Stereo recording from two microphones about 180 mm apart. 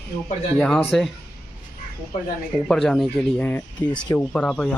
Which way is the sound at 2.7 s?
Centre (ahead or behind).